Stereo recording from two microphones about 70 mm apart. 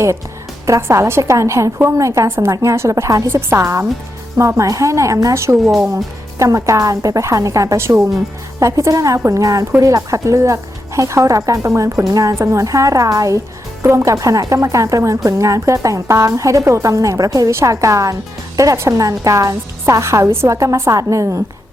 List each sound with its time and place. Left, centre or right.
0.6 s speech: right
17.5 s speech: right